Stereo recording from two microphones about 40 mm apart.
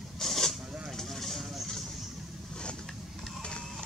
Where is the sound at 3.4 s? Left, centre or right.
Left.